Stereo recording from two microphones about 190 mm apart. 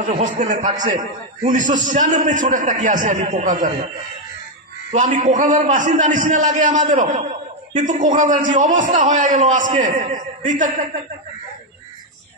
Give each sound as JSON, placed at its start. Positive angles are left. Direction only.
{"t": 0.0, "sound": "a man's voice", "side_deg": -40}
{"t": 4.9, "sound": "a man's voice", "side_deg": -40}